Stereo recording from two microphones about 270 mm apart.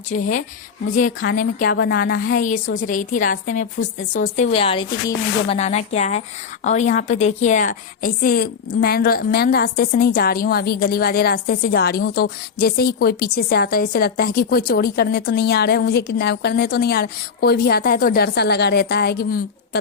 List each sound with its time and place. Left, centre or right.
0.1 s a woman's voice: left